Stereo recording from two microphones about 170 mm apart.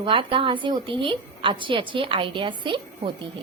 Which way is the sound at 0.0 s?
30° right (ahead or behind).